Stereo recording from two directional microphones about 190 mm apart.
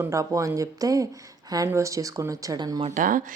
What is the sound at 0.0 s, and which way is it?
Speech, 15° right (ahead or behind).